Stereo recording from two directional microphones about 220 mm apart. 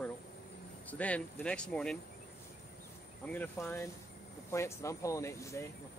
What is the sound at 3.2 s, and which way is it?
Speech, 5° left (ahead or behind).